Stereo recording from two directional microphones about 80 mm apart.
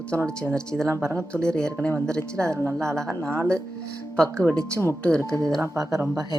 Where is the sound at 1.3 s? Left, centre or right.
Centre.